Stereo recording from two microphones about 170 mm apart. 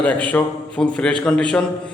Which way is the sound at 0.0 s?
10° left (ahead or behind).